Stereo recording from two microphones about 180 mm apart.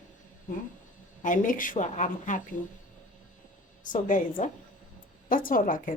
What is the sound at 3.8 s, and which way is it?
Speech, 45° left (ahead or behind).